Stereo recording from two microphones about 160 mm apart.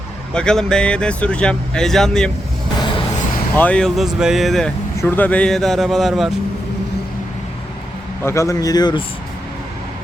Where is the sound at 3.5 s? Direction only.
10° left (ahead or behind).